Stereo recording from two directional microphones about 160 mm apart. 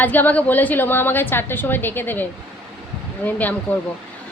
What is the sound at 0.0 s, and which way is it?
A woman's voice, 10° left (ahead or behind).